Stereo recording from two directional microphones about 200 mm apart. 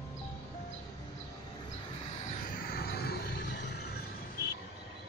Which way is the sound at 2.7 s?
50° left (ahead or behind).